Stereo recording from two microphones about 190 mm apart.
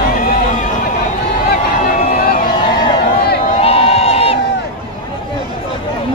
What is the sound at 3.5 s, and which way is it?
Crowd, 30° left (ahead or behind).